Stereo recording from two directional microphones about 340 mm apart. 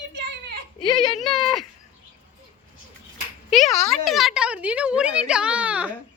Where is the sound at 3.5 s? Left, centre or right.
Centre.